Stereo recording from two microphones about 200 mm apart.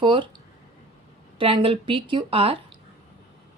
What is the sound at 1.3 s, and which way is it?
A woman's voice, 25° right (ahead or behind).